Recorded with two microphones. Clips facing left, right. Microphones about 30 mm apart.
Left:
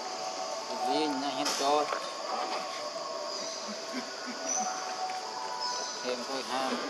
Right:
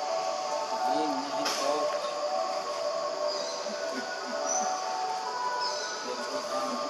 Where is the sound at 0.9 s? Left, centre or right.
Left.